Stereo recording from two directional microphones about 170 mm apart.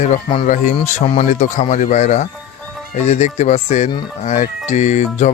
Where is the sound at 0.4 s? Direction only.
50° left (ahead or behind).